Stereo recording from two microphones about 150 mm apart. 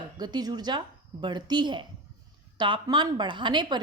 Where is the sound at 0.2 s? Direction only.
30° right (ahead or behind).